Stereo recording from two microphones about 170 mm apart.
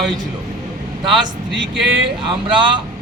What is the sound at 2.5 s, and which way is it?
Speech, 30° right (ahead or behind).